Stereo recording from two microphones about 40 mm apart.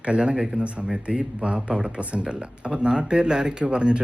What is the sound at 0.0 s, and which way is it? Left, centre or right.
Speech, right.